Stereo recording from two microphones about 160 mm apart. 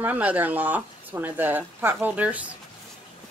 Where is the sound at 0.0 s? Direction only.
10° right (ahead or behind).